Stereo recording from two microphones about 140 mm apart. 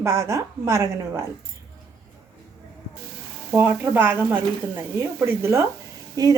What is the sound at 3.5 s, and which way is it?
A woman's voice, 15° right (ahead or behind).